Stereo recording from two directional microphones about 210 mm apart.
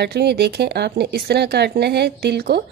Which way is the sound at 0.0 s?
50° right (ahead or behind).